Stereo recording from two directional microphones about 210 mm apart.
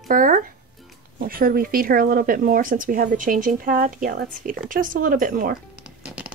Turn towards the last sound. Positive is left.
turn(degrees=-5)  # may be behind; listen again after turning